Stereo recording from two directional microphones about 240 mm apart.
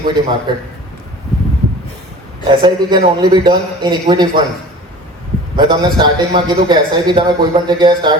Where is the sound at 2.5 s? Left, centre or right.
Centre.